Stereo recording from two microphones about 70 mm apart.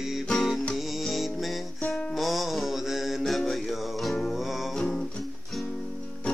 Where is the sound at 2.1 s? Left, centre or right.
Centre.